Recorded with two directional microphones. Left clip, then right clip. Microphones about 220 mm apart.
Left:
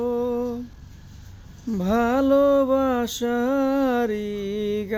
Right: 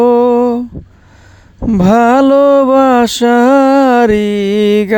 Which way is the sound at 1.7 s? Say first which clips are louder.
Right 14 dB; 50° right (ahead or behind).